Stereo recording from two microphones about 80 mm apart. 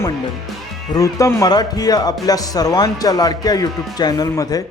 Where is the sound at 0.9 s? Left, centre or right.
Left.